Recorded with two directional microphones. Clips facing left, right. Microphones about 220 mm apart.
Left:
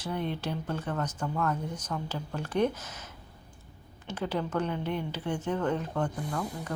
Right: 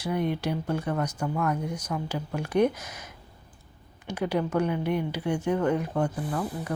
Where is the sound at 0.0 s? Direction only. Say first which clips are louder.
Right 5 dB; 10° right (ahead or behind).